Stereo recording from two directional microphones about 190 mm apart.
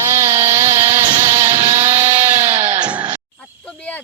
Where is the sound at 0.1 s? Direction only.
15° right (ahead or behind).